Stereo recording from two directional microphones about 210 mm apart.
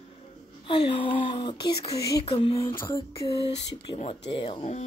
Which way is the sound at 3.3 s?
30° left (ahead or behind).